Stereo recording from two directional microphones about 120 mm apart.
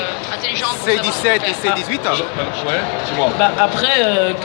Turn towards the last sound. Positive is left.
turn(degrees=5)  # may be behind; listen again after turning